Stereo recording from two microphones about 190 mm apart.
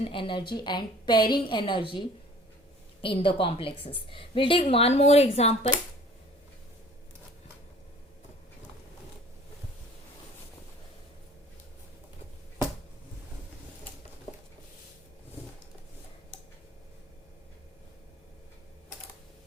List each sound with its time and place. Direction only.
0.0 s a woman's voice: 25° left (ahead or behind)